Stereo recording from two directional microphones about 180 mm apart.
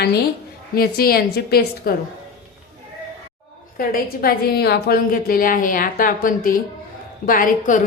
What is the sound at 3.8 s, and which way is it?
A woman's voice, 55° left (ahead or behind).